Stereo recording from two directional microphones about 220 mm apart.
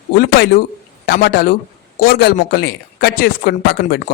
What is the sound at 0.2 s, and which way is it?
Speech, 45° left (ahead or behind).